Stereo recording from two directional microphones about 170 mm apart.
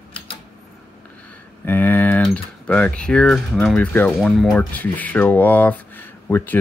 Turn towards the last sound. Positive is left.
turn(degrees=10)  # may be behind; listen again after turning